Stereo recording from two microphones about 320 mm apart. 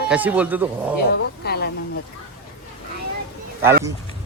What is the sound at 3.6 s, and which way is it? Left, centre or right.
Speech, centre.